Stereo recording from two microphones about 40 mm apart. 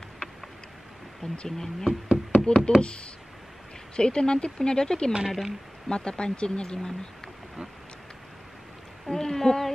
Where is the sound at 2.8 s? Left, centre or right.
Left.